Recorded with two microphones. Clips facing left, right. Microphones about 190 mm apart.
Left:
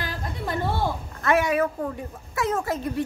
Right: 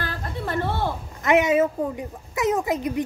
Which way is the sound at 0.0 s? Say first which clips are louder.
Right 1 dB; 15° left (ahead or behind).